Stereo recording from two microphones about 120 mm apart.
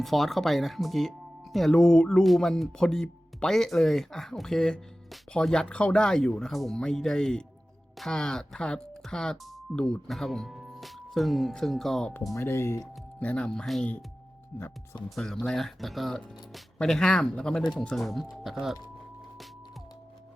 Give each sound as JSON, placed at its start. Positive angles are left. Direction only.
{"t": 0.0, "sound": "speech", "side_deg": 0}
{"t": 12.3, "sound": "speech", "side_deg": 20}
{"t": 13.2, "sound": "speech", "side_deg": 10}
{"t": 15.1, "sound": "speech", "side_deg": 5}